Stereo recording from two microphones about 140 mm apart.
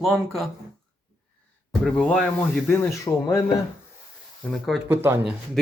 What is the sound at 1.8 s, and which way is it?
Speech, 5° left (ahead or behind).